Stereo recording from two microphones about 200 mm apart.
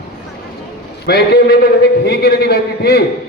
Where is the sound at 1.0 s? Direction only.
55° left (ahead or behind).